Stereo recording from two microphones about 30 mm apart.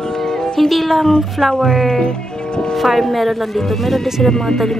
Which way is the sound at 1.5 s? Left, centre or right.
Left.